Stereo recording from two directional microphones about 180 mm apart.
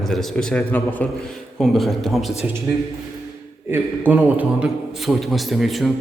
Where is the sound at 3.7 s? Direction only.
10° right (ahead or behind).